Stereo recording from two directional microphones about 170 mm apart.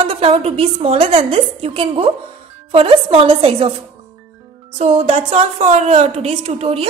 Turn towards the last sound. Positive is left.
turn(degrees=-35)  # may be behind; listen again after turning